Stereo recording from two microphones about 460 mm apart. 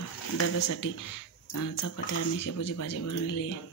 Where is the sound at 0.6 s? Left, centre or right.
Left.